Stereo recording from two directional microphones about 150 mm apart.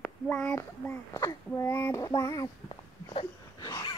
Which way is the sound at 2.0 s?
25° left (ahead or behind).